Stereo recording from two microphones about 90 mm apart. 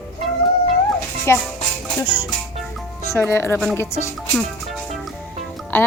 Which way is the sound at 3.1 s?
30° left (ahead or behind).